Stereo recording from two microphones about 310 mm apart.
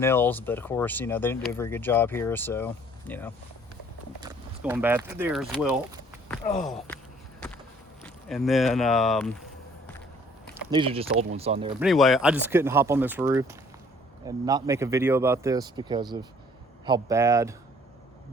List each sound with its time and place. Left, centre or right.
0.0 s speech: centre
4.2 s speech: centre
6.2 s a sound: centre
6.7 s a sound: centre
8.0 s speech: centre
10.7 s speech: centre
11.8 s speech: centre